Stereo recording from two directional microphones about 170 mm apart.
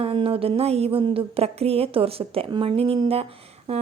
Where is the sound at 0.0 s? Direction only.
35° right (ahead or behind).